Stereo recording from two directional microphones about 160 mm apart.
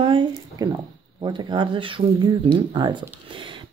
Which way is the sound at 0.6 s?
25° right (ahead or behind).